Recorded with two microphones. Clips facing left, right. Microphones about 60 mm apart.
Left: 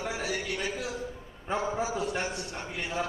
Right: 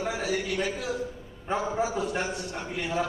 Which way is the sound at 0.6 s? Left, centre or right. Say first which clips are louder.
Right 4 dB; right.